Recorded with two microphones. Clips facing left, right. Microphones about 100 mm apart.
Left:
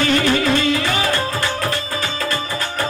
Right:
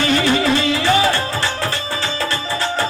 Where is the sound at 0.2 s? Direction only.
25° right (ahead or behind).